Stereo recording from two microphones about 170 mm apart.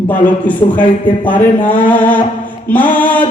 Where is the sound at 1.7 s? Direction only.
10° left (ahead or behind).